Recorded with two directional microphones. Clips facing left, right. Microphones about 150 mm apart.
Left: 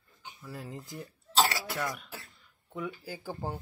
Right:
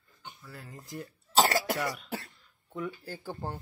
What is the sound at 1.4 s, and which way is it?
Cough, 50° right (ahead or behind).